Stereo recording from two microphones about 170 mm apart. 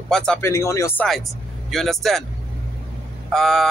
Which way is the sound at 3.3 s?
Centre (ahead or behind).